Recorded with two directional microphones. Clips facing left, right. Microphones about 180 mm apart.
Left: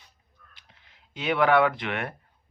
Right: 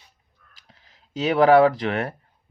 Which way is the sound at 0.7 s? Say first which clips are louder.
Right 13 dB; 35° right (ahead or behind).